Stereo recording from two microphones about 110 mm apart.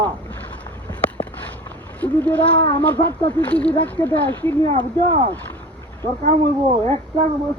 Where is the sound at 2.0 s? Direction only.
15° left (ahead or behind).